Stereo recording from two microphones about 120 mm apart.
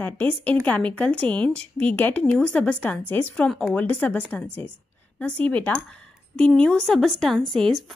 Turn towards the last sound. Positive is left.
turn(degrees=0)  # may be behind; listen again after turning